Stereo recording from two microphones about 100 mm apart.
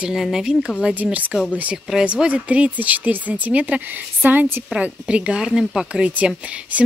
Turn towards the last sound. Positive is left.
turn(degrees=-15)  # may be behind; listen again after turning